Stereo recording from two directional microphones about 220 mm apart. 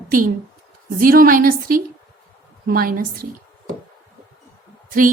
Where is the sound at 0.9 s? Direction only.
40° right (ahead or behind).